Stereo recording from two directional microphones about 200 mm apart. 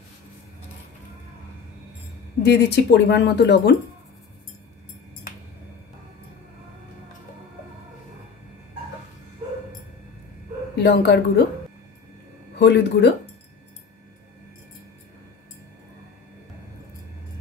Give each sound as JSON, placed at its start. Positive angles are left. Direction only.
{"t": 2.4, "sound": "speech", "side_deg": 55}
{"t": 10.8, "sound": "speech", "side_deg": 60}
{"t": 12.5, "sound": "speech", "side_deg": 60}